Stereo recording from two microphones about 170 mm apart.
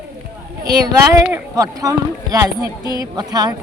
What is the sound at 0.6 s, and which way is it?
A woman's voice, 20° right (ahead or behind).